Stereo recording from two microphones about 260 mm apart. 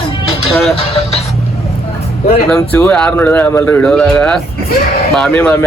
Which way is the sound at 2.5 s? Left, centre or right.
Centre.